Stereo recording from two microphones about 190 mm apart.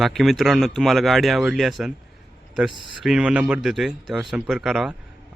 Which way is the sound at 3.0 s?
5° right (ahead or behind).